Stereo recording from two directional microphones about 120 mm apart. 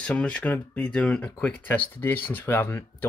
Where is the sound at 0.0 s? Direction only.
10° left (ahead or behind).